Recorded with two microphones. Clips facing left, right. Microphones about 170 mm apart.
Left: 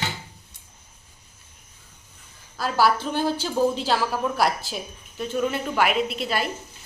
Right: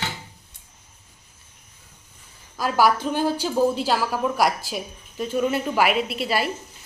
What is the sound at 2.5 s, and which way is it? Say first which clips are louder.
Speech: right 2 dB; 15° right (ahead or behind).